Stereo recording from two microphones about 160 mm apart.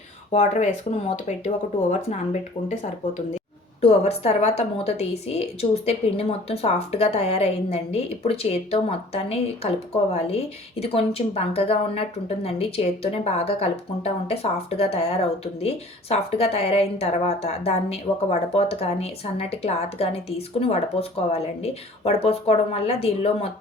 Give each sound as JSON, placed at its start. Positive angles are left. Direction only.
{"t": 0.3, "sound": "speech", "side_deg": 45}
{"t": 3.8, "sound": "speech", "side_deg": 40}